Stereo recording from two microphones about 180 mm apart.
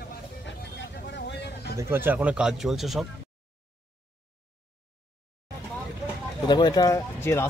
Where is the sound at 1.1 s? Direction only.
70° left (ahead or behind).